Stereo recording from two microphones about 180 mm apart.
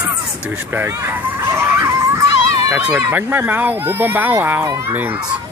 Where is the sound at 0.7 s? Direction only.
15° right (ahead or behind).